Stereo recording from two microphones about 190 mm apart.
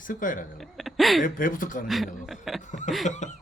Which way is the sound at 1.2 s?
45° left (ahead or behind).